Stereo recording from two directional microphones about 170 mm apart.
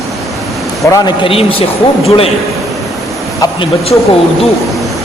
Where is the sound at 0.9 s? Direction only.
30° left (ahead or behind).